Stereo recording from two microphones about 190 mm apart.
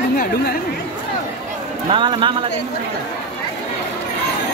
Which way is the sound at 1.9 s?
25° right (ahead or behind).